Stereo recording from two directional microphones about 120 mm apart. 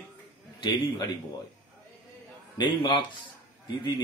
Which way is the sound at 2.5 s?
40° left (ahead or behind).